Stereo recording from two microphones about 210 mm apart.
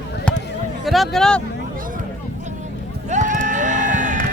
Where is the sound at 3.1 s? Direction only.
35° right (ahead or behind).